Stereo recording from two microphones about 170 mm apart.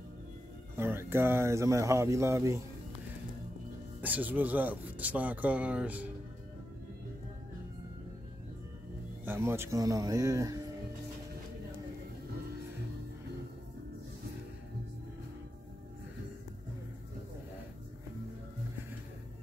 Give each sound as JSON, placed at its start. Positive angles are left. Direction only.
{"t": 0.7, "sound": "speech", "side_deg": -15}
{"t": 4.0, "sound": "speech", "side_deg": -10}
{"t": 9.2, "sound": "speech", "side_deg": -15}